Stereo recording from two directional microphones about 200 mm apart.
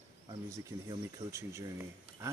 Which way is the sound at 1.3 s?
15° right (ahead or behind).